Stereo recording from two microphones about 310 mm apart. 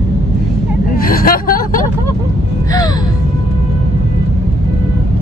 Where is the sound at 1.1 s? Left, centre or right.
Left.